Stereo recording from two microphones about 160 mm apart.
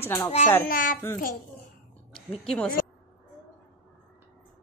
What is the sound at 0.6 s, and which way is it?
Speech, 60° left (ahead or behind).